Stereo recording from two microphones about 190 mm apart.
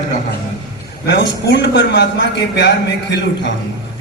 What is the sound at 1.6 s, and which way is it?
A man's voice, 65° left (ahead or behind).